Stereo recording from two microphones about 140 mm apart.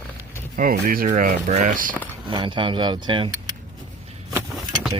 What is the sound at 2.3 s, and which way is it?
Speech, 35° right (ahead or behind).